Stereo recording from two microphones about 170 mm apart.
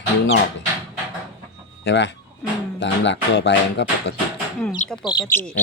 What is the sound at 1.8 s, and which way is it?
Speech, 90° left.